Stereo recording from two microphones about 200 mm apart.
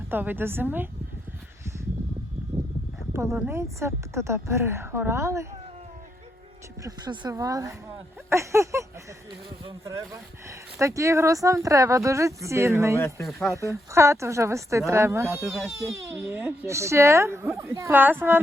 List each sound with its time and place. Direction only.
0.1 s speech: 10° right (ahead or behind)
3.1 s speech: 15° right (ahead or behind)
6.8 s speech: 20° right (ahead or behind)
8.3 s a sound: 15° right (ahead or behind)
9.6 s speech: 15° right (ahead or behind)